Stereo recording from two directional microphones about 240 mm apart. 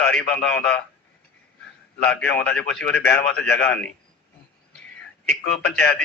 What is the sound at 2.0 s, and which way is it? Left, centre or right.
Speech, centre.